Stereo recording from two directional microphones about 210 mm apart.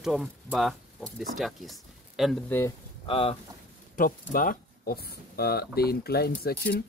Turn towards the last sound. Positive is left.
turn(degrees=50)  # may be behind; listen again after turning